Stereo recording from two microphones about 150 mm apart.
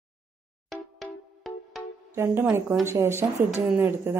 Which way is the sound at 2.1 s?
15° right (ahead or behind).